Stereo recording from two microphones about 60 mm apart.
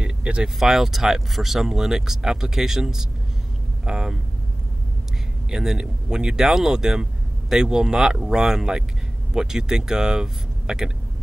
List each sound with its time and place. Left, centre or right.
0.0 s vehicle: centre
0.6 s speech: centre
5.5 s speech: centre